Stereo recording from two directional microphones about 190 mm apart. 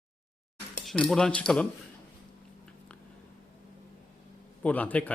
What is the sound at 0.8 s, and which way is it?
Speech, 5° left (ahead or behind).